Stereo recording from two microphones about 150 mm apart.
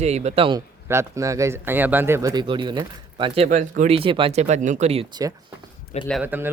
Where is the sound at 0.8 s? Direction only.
20° right (ahead or behind).